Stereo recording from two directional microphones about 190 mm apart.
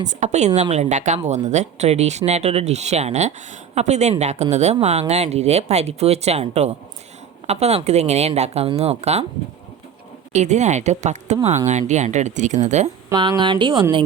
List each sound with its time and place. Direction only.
0.1 s speech: 35° right (ahead or behind)
10.3 s speech: 35° right (ahead or behind)
13.1 s speech: 20° right (ahead or behind)